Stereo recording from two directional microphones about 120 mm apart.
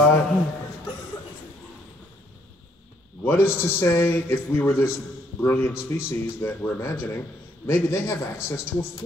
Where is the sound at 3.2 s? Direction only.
20° left (ahead or behind).